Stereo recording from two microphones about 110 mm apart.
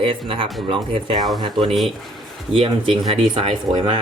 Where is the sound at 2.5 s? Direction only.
55° right (ahead or behind).